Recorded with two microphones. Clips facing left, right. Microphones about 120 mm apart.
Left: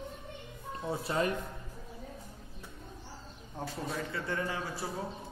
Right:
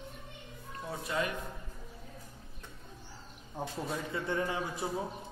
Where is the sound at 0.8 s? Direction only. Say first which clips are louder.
Left 3 dB; 30° left (ahead or behind).